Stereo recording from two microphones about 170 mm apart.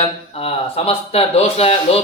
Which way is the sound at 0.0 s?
35° left (ahead or behind).